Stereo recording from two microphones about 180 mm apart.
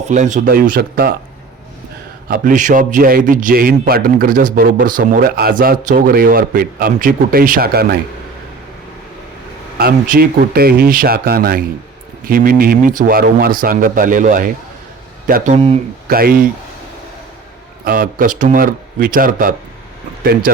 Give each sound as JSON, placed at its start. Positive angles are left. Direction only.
{"t": 0.0, "sound": "a man's voice", "side_deg": -40}
{"t": 2.2, "sound": "a man's voice", "side_deg": -50}
{"t": 9.7, "sound": "a man's voice", "side_deg": -55}
{"t": 16.0, "sound": "speech", "side_deg": -55}
{"t": 17.8, "sound": "a man's voice", "side_deg": -50}